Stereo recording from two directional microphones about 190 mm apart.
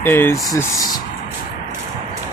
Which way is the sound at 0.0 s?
10° left (ahead or behind).